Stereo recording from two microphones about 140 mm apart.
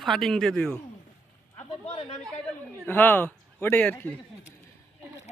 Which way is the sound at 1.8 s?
50° left (ahead or behind).